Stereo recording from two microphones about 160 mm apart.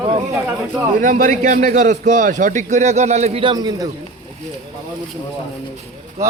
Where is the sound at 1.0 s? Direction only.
55° right (ahead or behind); by 3.8 s 25° right (ahead or behind).